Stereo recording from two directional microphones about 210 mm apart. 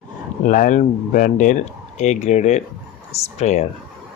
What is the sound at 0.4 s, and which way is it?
Speech, 40° left (ahead or behind).